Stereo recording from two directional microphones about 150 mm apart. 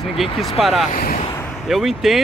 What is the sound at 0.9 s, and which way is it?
Speech, 75° left (ahead or behind).